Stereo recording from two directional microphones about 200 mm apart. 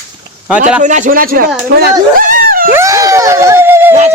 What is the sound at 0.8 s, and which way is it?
Speech, 40° right (ahead or behind).